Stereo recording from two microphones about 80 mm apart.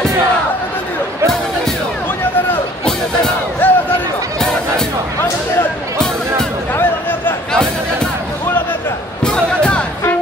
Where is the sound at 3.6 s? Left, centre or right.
Left.